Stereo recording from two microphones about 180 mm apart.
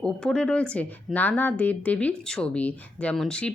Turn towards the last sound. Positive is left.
turn(degrees=5)  # may be behind; listen again after turning